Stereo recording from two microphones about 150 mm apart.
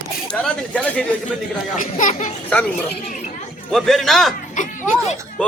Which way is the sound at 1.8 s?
60° left (ahead or behind).